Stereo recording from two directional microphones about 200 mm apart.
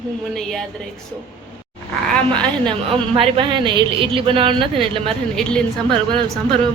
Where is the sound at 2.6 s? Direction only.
25° right (ahead or behind).